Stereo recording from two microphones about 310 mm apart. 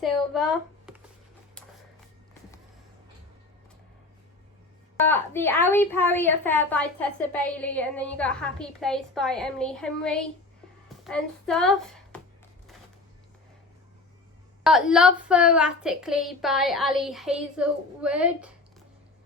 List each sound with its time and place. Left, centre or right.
0.0 s speech: centre
5.0 s a woman's voice: centre
14.6 s a woman's voice: centre